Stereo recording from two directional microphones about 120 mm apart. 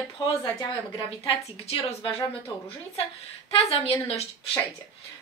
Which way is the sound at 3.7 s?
55° left (ahead or behind).